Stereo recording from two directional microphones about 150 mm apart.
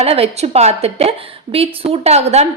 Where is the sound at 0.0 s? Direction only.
45° right (ahead or behind).